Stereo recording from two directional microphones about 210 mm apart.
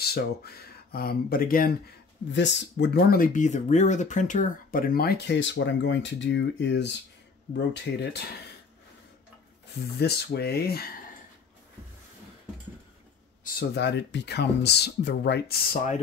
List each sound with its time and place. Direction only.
0.0 s speech: 50° left (ahead or behind)
2.3 s speech: 55° left (ahead or behind)
9.9 s speech: 50° left (ahead or behind)
13.4 s speech: 50° left (ahead or behind)